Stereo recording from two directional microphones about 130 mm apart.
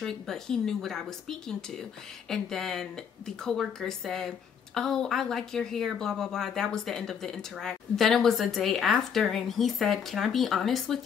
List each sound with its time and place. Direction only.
0.0 s a woman's voice: 5° left (ahead or behind)